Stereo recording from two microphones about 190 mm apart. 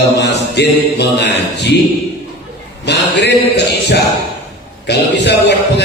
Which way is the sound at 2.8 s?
60° left (ahead or behind).